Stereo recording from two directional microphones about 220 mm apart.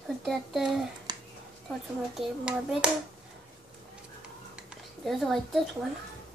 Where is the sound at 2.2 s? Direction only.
5° right (ahead or behind).